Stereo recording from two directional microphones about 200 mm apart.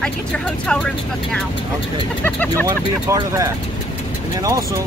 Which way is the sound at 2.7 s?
15° right (ahead or behind).